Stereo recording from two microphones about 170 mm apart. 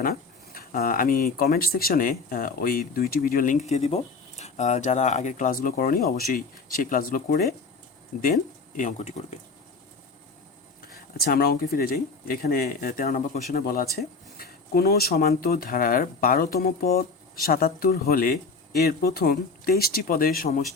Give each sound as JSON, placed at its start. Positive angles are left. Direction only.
{"t": 0.0, "sound": "speech", "side_deg": 60}
{"t": 10.8, "sound": "speech", "side_deg": 60}